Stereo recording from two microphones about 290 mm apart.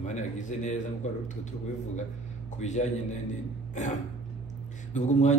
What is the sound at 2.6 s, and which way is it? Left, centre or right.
Speech, left.